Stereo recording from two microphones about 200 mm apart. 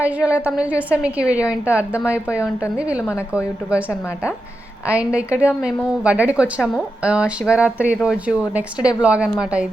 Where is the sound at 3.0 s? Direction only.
15° left (ahead or behind).